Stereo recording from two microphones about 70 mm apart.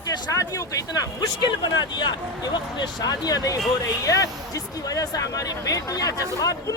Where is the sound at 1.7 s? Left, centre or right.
Left.